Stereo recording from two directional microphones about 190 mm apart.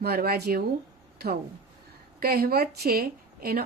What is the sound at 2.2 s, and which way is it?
A woman's voice, 55° right (ahead or behind).